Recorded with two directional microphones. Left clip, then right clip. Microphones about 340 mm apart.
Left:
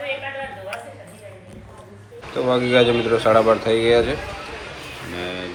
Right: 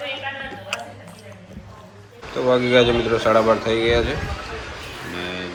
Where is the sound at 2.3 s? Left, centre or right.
Centre.